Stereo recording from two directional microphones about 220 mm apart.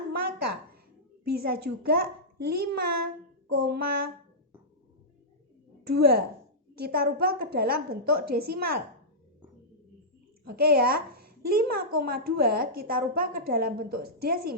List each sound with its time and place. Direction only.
0.2 s a sound: 45° right (ahead or behind)
1.2 s a woman's voice: 45° right (ahead or behind)
5.8 s a woman's voice: 45° right (ahead or behind)
10.4 s a woman's voice: 45° right (ahead or behind)